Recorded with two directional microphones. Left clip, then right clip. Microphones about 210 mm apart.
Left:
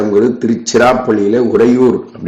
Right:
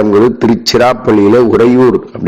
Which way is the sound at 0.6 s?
35° right (ahead or behind).